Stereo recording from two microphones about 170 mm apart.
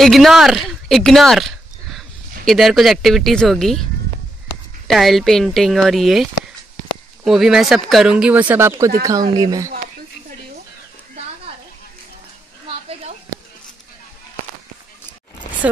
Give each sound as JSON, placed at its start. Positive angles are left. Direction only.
{"t": 0.0, "sound": "speech", "side_deg": 0}
{"t": 4.8, "sound": "speech", "side_deg": 0}
{"t": 7.2, "sound": "speech", "side_deg": 0}
{"t": 12.6, "sound": "a sound", "side_deg": -35}